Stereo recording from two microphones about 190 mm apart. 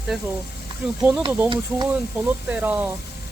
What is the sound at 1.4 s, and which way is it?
Speech, 20° right (ahead or behind).